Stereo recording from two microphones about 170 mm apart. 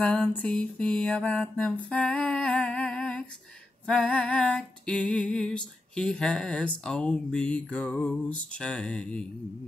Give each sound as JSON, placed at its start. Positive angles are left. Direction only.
{"t": 0.0, "sound": "mantra", "side_deg": 5}
{"t": 3.8, "sound": "music", "side_deg": 5}